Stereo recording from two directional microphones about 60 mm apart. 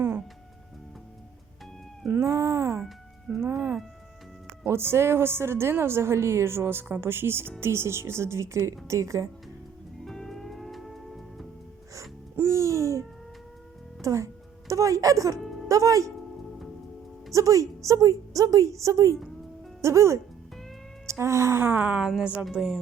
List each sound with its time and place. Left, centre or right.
2.2 s speech: right
3.4 s music: right
4.6 s a woman's voice: right
10.0 s music: centre
12.4 s music: right
14.0 s speech: right
17.3 s a woman's voice: right
21.6 s speech: right
21.9 s a woman's voice: centre